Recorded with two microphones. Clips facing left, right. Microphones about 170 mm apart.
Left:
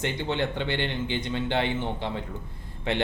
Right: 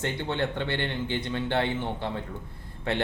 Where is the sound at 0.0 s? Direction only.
15° left (ahead or behind).